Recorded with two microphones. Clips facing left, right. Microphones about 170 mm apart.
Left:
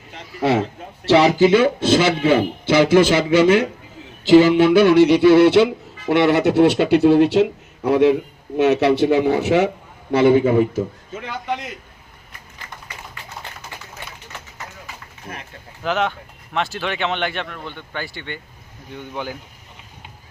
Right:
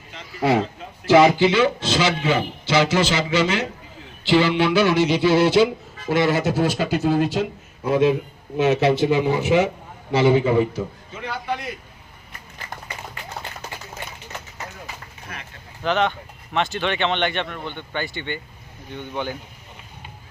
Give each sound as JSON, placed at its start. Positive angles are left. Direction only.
{"t": 1.0, "sound": "speech", "side_deg": 35}
{"t": 1.5, "sound": "a man's voice", "side_deg": 50}
{"t": 4.3, "sound": "a sound", "side_deg": 45}
{"t": 6.1, "sound": "speech", "side_deg": 65}
{"t": 7.9, "sound": "a sound", "side_deg": 65}
{"t": 10.1, "sound": "a man's voice", "side_deg": 55}
{"t": 15.8, "sound": "speech", "side_deg": 5}